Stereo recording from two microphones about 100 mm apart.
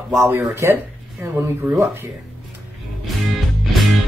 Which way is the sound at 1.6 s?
5° right (ahead or behind).